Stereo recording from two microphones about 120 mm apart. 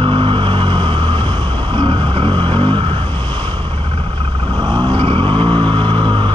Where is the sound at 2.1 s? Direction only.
50° right (ahead or behind).